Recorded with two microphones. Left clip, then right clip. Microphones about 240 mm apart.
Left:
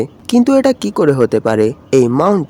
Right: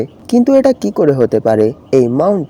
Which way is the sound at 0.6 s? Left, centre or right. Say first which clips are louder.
Right 1 dB; centre.